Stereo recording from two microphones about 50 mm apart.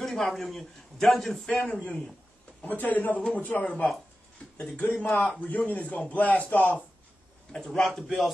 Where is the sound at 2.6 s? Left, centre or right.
Left.